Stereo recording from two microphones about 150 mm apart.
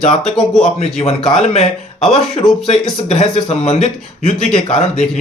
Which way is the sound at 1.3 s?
40° left (ahead or behind).